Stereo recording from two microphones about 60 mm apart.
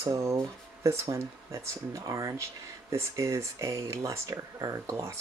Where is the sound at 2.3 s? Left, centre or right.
Right.